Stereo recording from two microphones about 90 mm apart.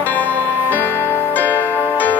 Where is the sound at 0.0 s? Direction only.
20° left (ahead or behind).